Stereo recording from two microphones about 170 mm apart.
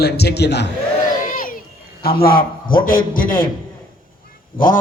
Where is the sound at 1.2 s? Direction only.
55° left (ahead or behind).